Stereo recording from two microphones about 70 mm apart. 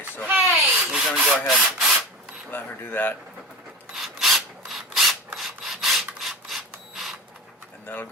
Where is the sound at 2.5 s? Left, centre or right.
Left.